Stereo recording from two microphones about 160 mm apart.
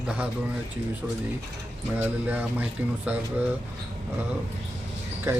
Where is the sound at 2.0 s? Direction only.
10° right (ahead or behind).